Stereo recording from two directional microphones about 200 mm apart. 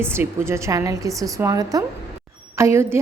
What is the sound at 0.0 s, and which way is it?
A woman's voice, 10° right (ahead or behind).